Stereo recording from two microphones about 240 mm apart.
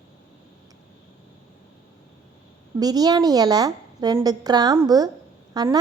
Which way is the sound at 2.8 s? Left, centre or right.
Centre.